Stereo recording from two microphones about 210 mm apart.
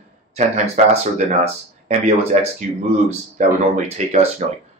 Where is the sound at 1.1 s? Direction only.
35° right (ahead or behind).